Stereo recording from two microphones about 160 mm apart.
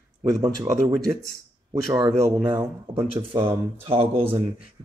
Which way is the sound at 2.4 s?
30° right (ahead or behind).